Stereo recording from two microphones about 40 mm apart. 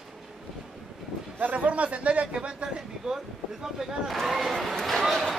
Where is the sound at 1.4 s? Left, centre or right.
Right.